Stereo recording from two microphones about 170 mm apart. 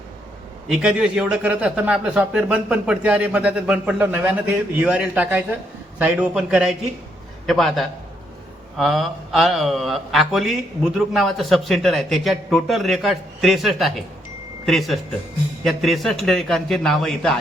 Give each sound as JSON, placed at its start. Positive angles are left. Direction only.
{"t": 0.7, "sound": "a man's voice", "side_deg": -5}